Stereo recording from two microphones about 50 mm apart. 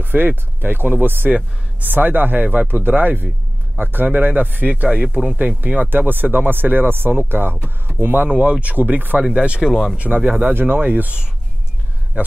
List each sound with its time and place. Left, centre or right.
0.0 s speech: right
4.8 s speech: right
5.8 s speech: right
8.4 s speech: right
9.2 s speech: centre
9.9 s speech: right
10.5 s a man's voice: right